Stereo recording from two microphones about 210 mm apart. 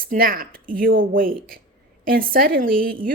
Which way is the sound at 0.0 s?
45° right (ahead or behind).